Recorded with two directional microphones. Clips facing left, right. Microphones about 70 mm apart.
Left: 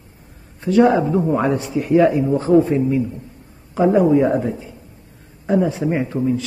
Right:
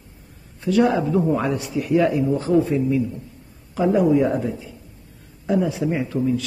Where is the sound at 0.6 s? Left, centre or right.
Left.